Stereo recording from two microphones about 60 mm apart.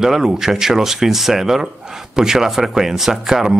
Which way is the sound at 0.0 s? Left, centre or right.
Centre.